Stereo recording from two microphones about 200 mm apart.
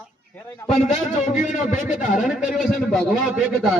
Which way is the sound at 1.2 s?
40° left (ahead or behind).